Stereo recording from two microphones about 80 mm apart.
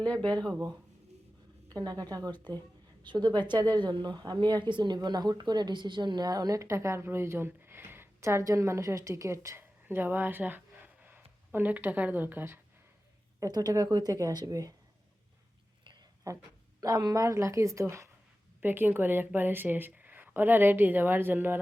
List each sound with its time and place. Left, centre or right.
0.0 s speech: centre
1.7 s a woman's voice: right
3.0 s speech: right
5.0 s speech: right
6.2 s a woman's voice: right
9.8 s speech: right
13.5 s a woman's voice: right
16.3 s a woman's voice: right
18.6 s a woman's voice: right